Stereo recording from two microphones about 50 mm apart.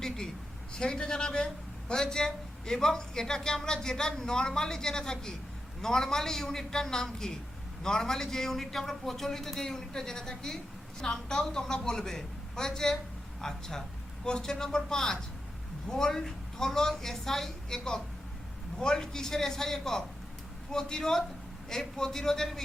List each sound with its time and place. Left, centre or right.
0.7 s a man's voice: centre